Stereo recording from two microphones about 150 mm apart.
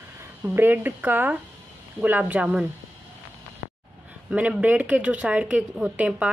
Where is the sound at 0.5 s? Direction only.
15° right (ahead or behind).